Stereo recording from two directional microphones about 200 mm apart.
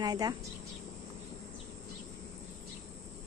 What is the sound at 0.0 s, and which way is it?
Speech, 20° right (ahead or behind).